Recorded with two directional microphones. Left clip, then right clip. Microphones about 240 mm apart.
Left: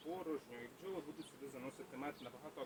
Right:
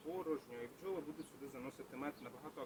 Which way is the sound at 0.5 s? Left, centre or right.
Centre.